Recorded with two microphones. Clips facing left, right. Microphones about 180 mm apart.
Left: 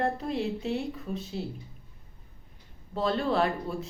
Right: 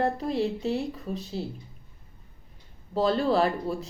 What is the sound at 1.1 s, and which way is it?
Speech, 35° right (ahead or behind).